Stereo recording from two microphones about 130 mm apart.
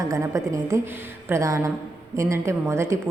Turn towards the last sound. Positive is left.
turn(degrees=-20)  # may be behind; listen again after turning